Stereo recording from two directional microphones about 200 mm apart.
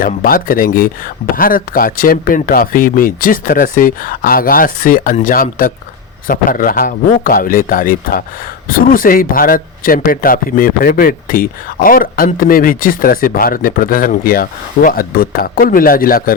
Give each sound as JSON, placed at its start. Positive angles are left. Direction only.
{"t": 0.0, "sound": "speech", "side_deg": 45}